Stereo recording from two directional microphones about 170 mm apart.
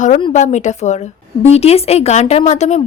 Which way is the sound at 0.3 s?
45° left (ahead or behind).